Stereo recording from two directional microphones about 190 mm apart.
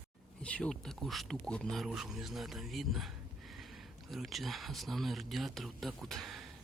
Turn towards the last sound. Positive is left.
turn(degrees=0)  # may be behind; listen again after turning